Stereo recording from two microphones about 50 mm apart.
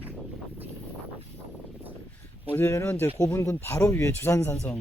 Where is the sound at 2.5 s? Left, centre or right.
Left.